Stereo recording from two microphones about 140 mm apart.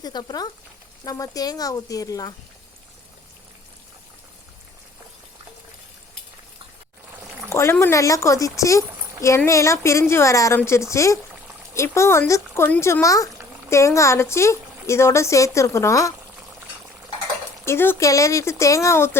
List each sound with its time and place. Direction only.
0.0 s speech: 30° left (ahead or behind)
7.5 s speech: 20° left (ahead or behind)
17.7 s speech: 15° left (ahead or behind)